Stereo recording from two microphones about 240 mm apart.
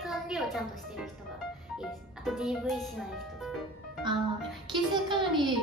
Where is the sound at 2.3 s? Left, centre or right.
Centre.